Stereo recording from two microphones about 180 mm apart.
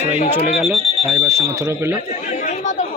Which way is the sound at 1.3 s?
15° right (ahead or behind).